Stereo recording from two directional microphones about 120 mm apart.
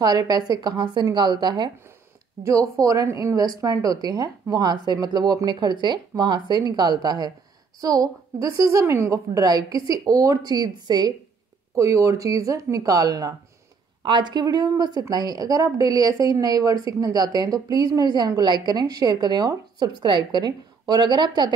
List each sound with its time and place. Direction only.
0.0 s a woman's voice: 35° right (ahead or behind)
2.4 s a woman's voice: 25° right (ahead or behind)